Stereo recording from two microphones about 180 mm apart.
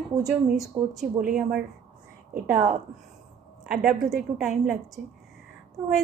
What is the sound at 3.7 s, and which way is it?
Speech, 5° right (ahead or behind).